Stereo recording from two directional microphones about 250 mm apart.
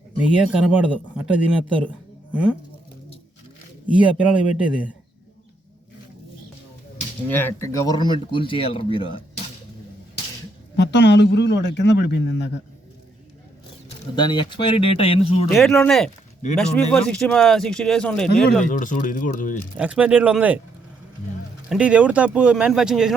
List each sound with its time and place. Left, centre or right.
0.2 s speech: centre
3.9 s speech: centre
7.3 s speech: centre
10.8 s a man's voice: left
14.2 s speech: centre
15.4 s speech: centre
18.7 s speech: left
19.7 s speech: centre
21.7 s speech: centre